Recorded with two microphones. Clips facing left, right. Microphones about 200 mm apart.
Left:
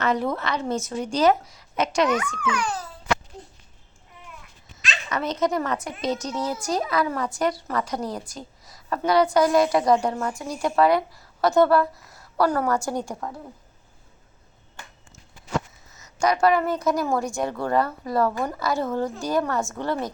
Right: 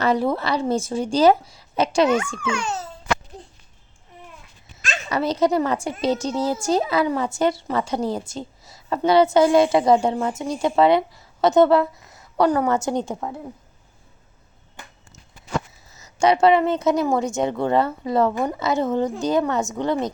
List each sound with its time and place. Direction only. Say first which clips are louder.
0.0 s a woman's voice: right 4 dB; 30° right (ahead or behind)
5.0 s a woman's voice: right 4 dB; 30° right (ahead or behind)
15.9 s a sound: right 2 dB; 30° right (ahead or behind)
16.2 s a woman's voice: right 4 dB; 25° right (ahead or behind)